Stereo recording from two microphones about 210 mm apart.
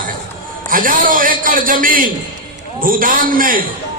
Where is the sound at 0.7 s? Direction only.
40° right (ahead or behind).